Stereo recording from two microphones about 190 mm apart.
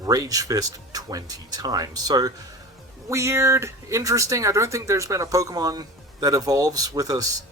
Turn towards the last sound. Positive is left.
turn(degrees=-20)  # may be behind; listen again after turning